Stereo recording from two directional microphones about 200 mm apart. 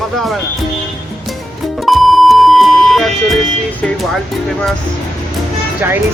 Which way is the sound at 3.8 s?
Centre (ahead or behind).